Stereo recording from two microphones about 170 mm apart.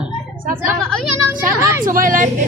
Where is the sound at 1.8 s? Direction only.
55° right (ahead or behind).